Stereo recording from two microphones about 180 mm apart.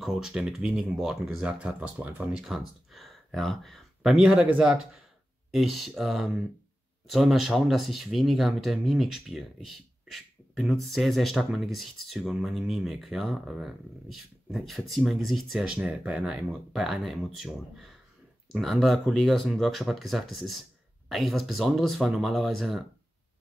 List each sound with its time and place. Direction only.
0.0 s speech: 5° right (ahead or behind)